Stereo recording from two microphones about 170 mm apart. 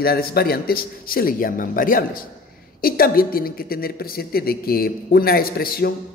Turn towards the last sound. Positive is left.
turn(degrees=60)  # may be behind; listen again after turning